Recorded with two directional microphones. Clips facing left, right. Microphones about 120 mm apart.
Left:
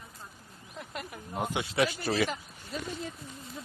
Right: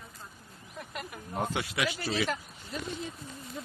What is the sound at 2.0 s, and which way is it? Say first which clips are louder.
Speech: left 2 dB; 55° left (ahead or behind).